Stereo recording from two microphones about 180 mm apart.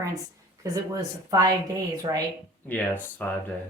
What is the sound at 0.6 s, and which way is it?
Speech, 20° right (ahead or behind).